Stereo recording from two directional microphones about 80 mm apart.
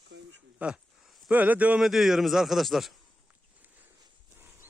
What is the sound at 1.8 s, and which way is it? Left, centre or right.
A man's voice, centre.